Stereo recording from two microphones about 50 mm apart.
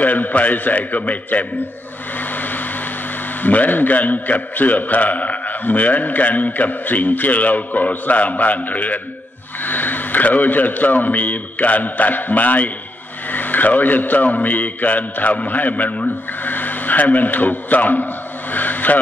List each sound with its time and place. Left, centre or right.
0.0 s a man's voice: left
2.1 s a sound: left
3.3 s a man's voice: left